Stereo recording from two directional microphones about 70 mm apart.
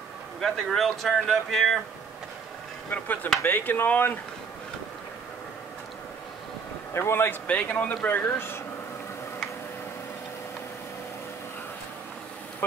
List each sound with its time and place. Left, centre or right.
0.4 s speech: centre
2.9 s speech: left
6.9 s speech: left
7.4 s speech: left
8.1 s speech: left